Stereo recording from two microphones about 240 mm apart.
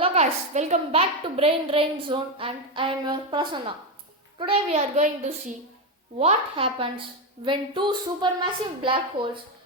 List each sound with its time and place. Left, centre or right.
0.0 s a woman's voice: right